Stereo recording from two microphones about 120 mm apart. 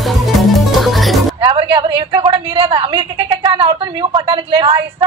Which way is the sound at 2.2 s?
45° right (ahead or behind).